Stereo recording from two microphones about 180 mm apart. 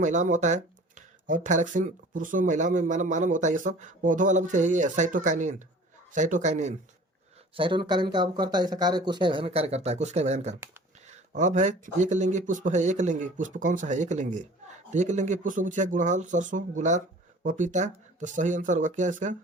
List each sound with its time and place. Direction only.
0.0 s a man's voice: 40° right (ahead or behind)
7.5 s speech: 25° right (ahead or behind); by 19.4 s 45° right (ahead or behind)